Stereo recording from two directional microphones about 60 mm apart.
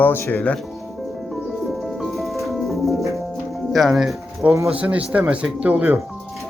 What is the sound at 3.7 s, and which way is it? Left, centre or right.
Speech, centre.